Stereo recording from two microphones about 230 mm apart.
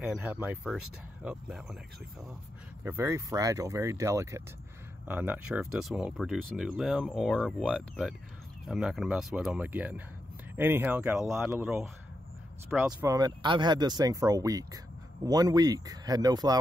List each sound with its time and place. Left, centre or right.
0.0 s speech: centre
2.8 s speech: centre
13.0 s speech: centre